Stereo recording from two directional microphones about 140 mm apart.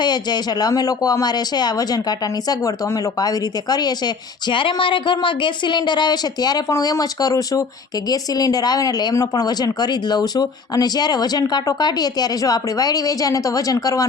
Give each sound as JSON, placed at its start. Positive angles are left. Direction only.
{"t": 0.0, "sound": "speech", "side_deg": 30}